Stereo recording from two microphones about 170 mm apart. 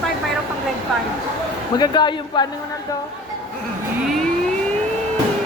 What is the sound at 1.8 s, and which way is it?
Speech, 25° left (ahead or behind).